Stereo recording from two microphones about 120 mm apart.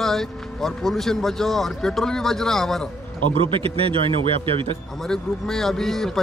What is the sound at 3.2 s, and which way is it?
Speech, 50° right (ahead or behind).